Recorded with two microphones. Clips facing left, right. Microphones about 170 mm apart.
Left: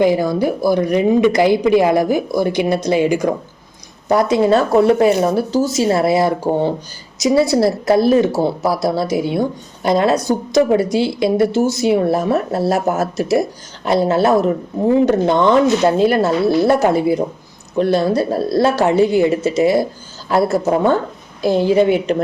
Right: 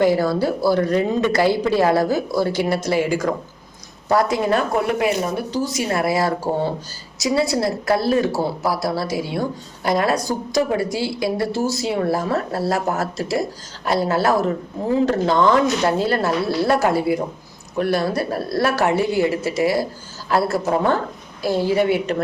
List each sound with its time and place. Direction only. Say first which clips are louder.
0.0 s a woman's voice: left 3 dB; 15° left (ahead or behind)